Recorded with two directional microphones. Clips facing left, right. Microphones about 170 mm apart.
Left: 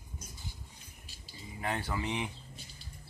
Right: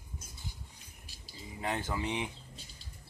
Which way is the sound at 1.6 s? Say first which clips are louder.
Even; 15° right (ahead or behind).